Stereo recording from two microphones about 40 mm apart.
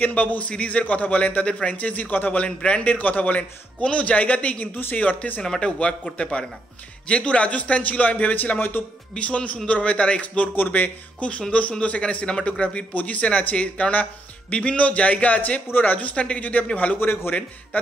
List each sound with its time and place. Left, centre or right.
0.0 s a man's voice: left
0.5 s a man's voice: left
2.4 s a man's voice: left
3.8 s a man's voice: left
5.4 s a man's voice: left
8.5 s a man's voice: left
9.1 s a man's voice: left
12.9 s a man's voice: left